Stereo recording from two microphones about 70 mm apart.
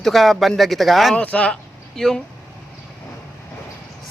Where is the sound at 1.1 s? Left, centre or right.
Centre.